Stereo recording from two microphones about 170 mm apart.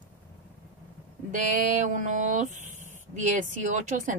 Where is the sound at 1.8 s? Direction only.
45° right (ahead or behind).